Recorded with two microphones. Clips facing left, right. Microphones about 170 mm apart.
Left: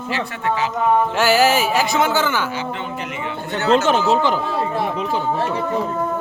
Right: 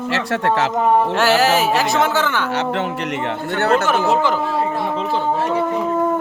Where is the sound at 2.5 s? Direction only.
75° right (ahead or behind).